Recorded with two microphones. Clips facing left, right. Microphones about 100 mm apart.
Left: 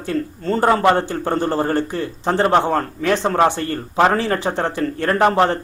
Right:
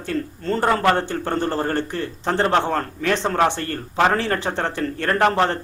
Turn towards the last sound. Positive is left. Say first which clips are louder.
# left 3 dB
turn(degrees=20)  # may be behind; listen again after turning